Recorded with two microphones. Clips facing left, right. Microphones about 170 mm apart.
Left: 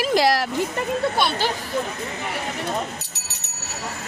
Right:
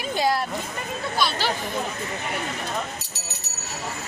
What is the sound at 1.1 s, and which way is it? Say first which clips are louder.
Speech: left 3 dB; 60° left (ahead or behind).